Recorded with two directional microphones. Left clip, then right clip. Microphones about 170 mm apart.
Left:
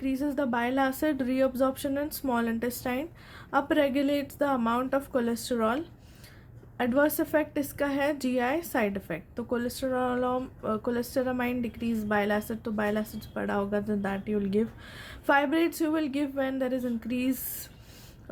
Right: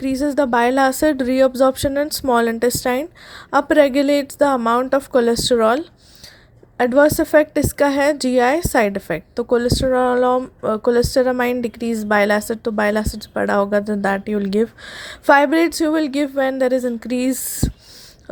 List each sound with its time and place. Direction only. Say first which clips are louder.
0.0 s a woman's voice: right 11 dB; 45° right (ahead or behind)